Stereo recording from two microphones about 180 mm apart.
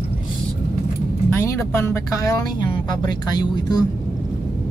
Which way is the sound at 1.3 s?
15° left (ahead or behind).